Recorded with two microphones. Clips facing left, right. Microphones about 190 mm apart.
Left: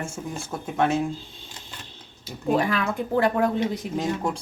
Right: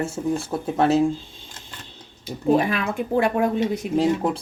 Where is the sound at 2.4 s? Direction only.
20° right (ahead or behind).